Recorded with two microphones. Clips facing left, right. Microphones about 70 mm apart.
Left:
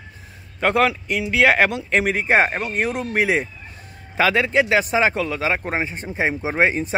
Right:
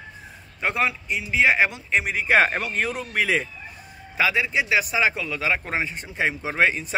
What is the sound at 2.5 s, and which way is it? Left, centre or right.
Speech, centre.